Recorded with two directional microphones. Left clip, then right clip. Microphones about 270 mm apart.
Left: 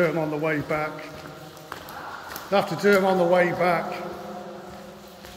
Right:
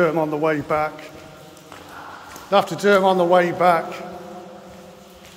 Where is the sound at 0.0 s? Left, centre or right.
Right.